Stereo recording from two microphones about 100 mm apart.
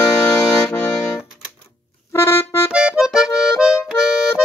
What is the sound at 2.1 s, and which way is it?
Music, 25° left (ahead or behind).